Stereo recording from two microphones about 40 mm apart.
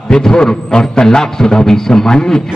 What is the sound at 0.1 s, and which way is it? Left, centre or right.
A man's voice, centre.